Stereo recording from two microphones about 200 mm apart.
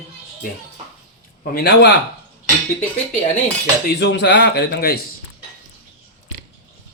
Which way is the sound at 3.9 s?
60° left (ahead or behind).